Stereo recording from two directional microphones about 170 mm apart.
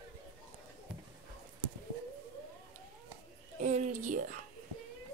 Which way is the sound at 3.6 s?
45° right (ahead or behind).